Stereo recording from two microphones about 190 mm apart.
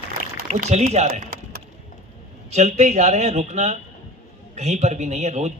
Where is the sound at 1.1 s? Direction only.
50° right (ahead or behind).